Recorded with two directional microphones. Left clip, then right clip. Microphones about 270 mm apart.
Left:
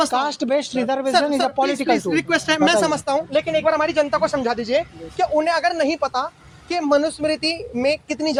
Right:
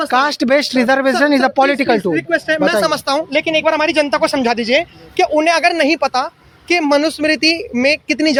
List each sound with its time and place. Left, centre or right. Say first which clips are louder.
0.1 s speech: right 7 dB; right
2.1 s speech: right 3 dB; centre
2.9 s speech: right 4 dB; right